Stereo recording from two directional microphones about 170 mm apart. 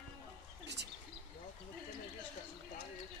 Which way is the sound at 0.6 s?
85° right.